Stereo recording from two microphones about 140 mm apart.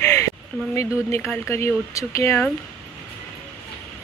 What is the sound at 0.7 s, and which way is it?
Speech, 20° left (ahead or behind).